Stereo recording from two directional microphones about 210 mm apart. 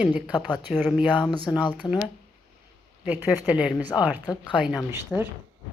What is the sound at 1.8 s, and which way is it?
Speech, 25° left (ahead or behind).